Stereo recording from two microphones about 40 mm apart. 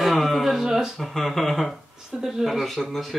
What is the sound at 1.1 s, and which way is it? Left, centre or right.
Speech, centre.